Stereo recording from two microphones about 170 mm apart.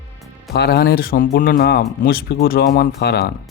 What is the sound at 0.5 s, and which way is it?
Speech, 75° left (ahead or behind).